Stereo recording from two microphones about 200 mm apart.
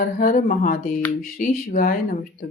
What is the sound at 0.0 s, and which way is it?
Speech, 45° left (ahead or behind).